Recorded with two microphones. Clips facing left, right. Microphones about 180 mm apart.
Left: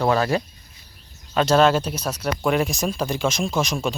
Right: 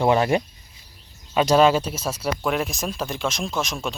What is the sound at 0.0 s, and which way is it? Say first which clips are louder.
Speech: right 1 dB; 15° right (ahead or behind).